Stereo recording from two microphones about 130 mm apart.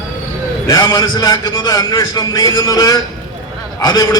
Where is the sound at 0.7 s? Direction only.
30° left (ahead or behind).